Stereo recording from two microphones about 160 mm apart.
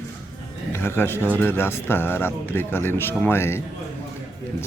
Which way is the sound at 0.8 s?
15° left (ahead or behind).